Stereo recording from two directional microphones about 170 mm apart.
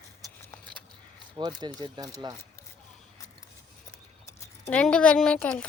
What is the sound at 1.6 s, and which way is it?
Speech, 25° right (ahead or behind).